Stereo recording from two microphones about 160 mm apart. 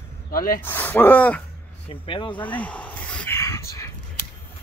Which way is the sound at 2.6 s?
10° left (ahead or behind).